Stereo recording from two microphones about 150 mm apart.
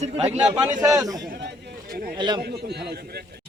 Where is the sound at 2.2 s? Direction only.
30° right (ahead or behind).